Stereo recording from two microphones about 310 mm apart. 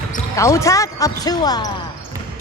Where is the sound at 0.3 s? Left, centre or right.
Centre.